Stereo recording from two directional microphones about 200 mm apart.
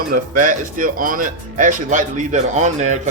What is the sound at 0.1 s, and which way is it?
Speech, 40° right (ahead or behind).